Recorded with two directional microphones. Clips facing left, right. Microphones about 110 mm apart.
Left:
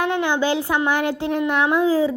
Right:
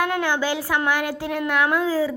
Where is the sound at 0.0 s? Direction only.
25° left (ahead or behind).